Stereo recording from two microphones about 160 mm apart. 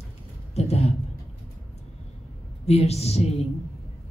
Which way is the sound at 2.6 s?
40° left (ahead or behind).